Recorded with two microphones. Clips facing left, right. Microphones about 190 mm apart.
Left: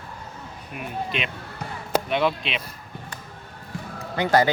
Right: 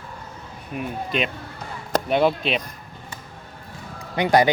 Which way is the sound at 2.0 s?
40° right (ahead or behind).